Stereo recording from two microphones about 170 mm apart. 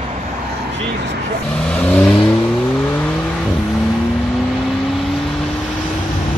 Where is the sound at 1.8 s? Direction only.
10° left (ahead or behind).